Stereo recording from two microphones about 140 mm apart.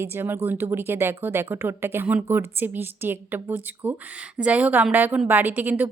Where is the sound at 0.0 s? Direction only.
15° right (ahead or behind).